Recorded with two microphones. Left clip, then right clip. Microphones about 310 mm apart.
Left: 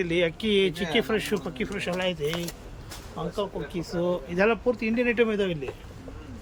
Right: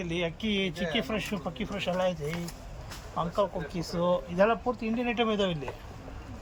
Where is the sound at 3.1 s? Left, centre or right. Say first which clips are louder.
Right 2 dB; centre.